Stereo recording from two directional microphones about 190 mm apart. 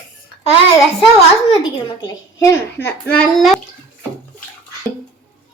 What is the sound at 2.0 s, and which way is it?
A child's voice, 20° left (ahead or behind).